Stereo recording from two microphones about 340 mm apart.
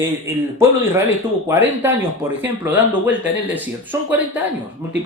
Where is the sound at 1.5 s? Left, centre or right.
Centre.